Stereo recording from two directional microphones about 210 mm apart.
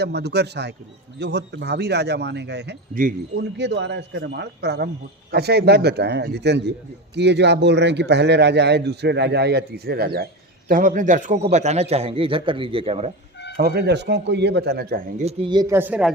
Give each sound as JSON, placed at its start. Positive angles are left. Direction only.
{"t": 0.0, "sound": "a man's voice", "side_deg": -50}
{"t": 13.6, "sound": "a man's voice", "side_deg": -50}
{"t": 15.2, "sound": "speech", "side_deg": -25}